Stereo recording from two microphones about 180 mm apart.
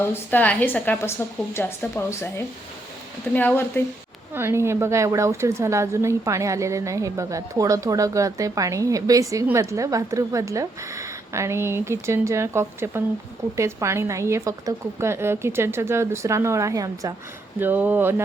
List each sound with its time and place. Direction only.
0.1 s a woman's voice: 10° left (ahead or behind)
3.3 s a woman's voice: 10° left (ahead or behind)
4.4 s a woman's voice: 15° right (ahead or behind)